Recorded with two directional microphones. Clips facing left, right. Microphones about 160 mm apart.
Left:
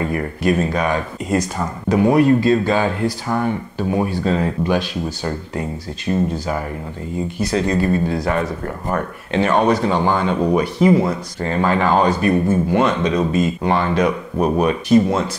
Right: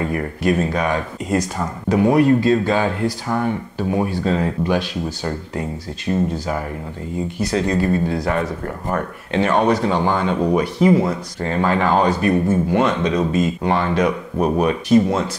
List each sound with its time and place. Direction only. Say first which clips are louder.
0.0 s speech: left 1 dB; 20° left (ahead or behind)
7.5 s speech: left 1 dB; 20° left (ahead or behind)